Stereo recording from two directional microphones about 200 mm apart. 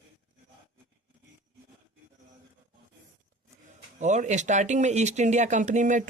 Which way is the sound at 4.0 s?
35° right (ahead or behind).